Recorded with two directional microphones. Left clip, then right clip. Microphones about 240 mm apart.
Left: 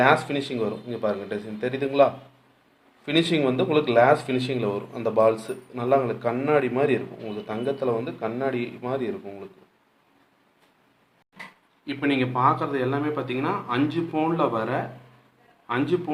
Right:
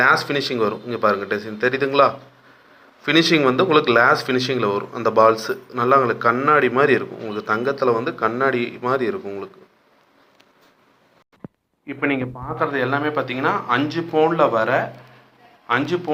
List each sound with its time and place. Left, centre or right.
0.0 s a man's voice: centre
11.9 s a man's voice: centre